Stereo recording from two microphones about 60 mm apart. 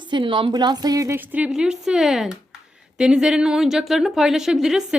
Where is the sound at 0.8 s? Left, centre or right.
Right.